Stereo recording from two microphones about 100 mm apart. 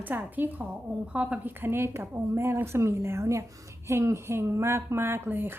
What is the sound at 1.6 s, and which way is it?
A woman's voice, 25° right (ahead or behind).